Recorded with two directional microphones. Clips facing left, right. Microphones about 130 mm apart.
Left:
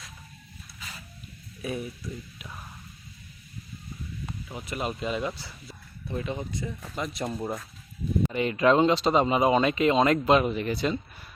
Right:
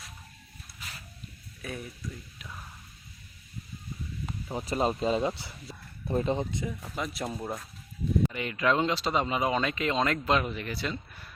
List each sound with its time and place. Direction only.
1.6 s speech: 10° left (ahead or behind)
4.4 s speech: 35° right (ahead or behind)
6.4 s speech: 20° right (ahead or behind)
6.7 s speech: 5° right (ahead or behind)
8.3 s speech: 25° left (ahead or behind)